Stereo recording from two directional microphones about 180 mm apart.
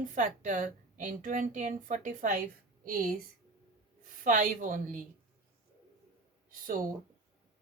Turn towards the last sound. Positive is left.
turn(degrees=-50)  # may be behind; listen again after turning